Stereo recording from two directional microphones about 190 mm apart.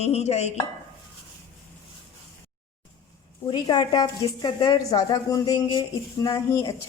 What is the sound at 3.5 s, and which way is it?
A woman's voice, 25° left (ahead or behind).